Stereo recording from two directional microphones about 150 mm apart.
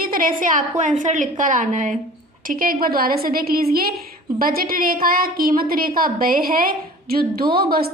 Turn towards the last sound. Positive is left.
turn(degrees=-90)